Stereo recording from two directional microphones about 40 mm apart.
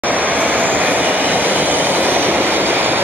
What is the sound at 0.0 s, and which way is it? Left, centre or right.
Train, right.